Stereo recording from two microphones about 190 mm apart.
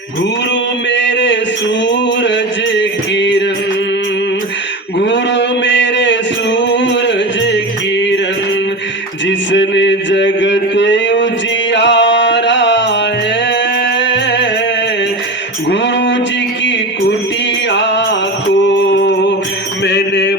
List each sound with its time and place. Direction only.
0.9 s a sound: 70° left (ahead or behind)
2.2 s music: 70° left (ahead or behind)
4.9 s music: 65° left (ahead or behind)
9.2 s a sound: 70° left (ahead or behind)
11.7 s music: 70° left (ahead or behind)
14.0 s music: 70° left (ahead or behind)
15.7 s a sound: 70° left (ahead or behind)
17.7 s music: 70° left (ahead or behind)
19.8 s mantra: 65° left (ahead or behind)